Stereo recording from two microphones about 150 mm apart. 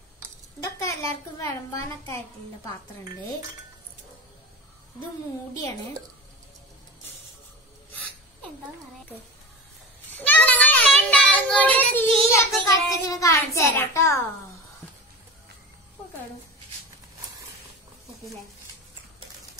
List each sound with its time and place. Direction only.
0.6 s a woman's voice: 20° left (ahead or behind)
10.1 s child singing: 10° left (ahead or behind)
12.4 s a child's voice: 20° left (ahead or behind)